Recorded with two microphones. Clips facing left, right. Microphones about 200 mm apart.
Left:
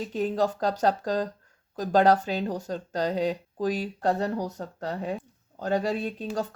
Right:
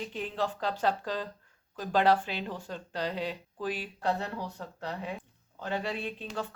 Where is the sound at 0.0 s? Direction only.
40° left (ahead or behind).